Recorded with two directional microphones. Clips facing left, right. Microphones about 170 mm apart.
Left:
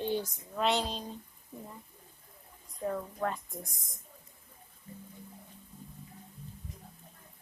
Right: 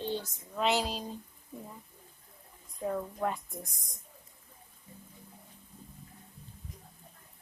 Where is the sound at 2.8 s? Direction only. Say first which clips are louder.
Right 1 dB; 10° right (ahead or behind).